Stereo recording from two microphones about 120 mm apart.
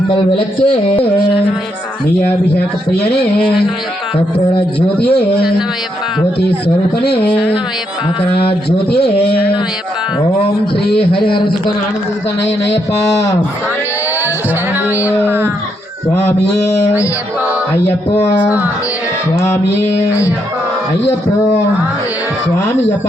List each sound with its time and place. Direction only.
0.1 s a man's voice: 50° left (ahead or behind)
7.0 s a man's voice: 50° left (ahead or behind)
10.9 s a man's voice: 50° left (ahead or behind)
17.8 s music: 60° left (ahead or behind)
18.4 s speech: 10° right (ahead or behind)